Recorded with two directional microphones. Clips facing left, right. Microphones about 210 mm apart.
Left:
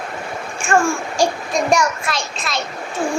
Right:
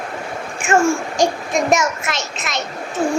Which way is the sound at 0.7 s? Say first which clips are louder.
Right 2 dB; 20° right (ahead or behind).